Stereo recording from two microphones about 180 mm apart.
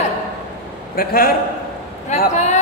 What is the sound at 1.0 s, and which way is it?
Speech, 55° left (ahead or behind).